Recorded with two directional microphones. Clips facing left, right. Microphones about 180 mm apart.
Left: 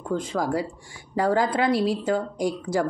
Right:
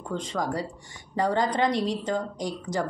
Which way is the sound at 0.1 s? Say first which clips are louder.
Left 4 dB; 10° left (ahead or behind).